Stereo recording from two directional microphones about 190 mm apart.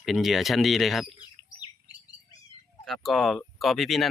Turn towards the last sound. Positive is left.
turn(degrees=0)  # may be behind; listen again after turning